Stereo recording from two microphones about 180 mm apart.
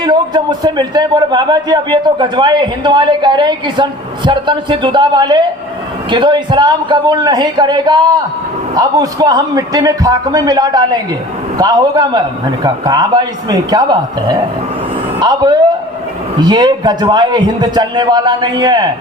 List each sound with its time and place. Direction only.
0.0 s a man's voice: 25° right (ahead or behind)